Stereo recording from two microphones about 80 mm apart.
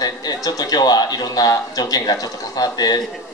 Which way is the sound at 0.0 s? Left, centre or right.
Left.